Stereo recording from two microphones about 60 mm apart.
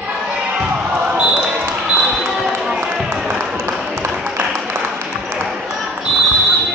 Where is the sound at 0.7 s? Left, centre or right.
Right.